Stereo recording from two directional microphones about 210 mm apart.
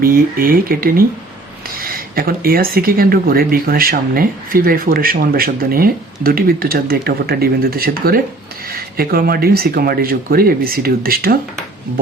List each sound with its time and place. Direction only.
0.0 s speech: 45° right (ahead or behind)